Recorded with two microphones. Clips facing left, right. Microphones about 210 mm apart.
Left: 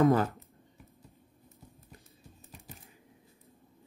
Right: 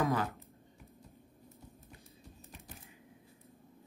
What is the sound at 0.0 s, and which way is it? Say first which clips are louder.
Speech: left 8 dB; 45° left (ahead or behind).